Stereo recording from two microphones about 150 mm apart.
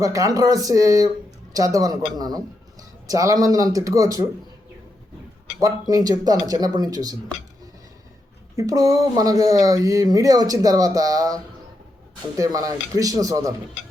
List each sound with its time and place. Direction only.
0.0 s speech: 25° right (ahead or behind)
5.5 s speech: 25° right (ahead or behind)
8.5 s speech: 25° right (ahead or behind)
12.4 s speech: 25° right (ahead or behind)